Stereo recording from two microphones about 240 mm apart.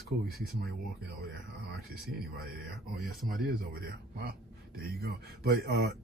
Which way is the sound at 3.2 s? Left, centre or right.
Centre.